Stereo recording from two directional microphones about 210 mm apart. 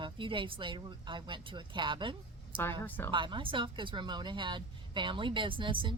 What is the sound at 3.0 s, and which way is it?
Speech, 25° right (ahead or behind).